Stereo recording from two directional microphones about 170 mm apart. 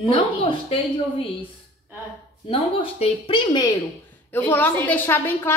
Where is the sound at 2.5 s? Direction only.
35° left (ahead or behind).